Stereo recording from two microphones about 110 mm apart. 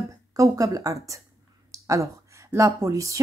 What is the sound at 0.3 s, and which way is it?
A woman's voice, 30° right (ahead or behind).